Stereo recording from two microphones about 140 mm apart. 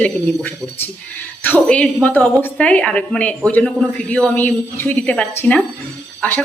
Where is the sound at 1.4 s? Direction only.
10° left (ahead or behind).